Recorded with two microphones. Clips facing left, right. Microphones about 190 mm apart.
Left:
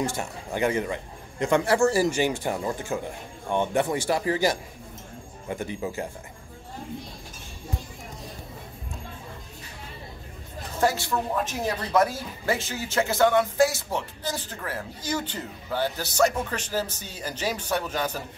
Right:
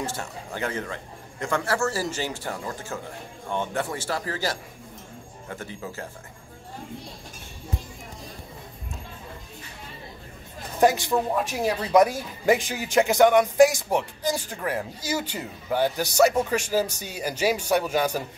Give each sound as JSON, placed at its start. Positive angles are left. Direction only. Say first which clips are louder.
{"t": 0.0, "sound": "a man's voice", "louder": "left 3 dB", "side_deg": 15}
{"t": 10.8, "sound": "speech", "louder": "right 4 dB", "side_deg": -20}